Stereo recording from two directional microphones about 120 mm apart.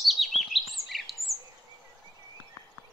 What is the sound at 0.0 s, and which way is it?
Chirp, centre (ahead or behind).